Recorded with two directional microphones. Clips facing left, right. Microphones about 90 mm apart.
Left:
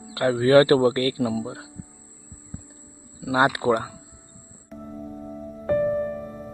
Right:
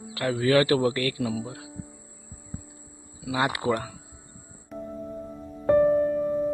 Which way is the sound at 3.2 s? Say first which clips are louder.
Left 6 dB; 35° left (ahead or behind).